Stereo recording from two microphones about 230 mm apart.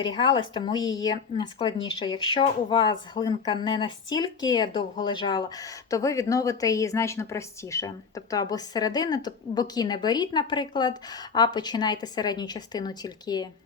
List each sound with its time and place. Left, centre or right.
0.0 s a woman's voice: centre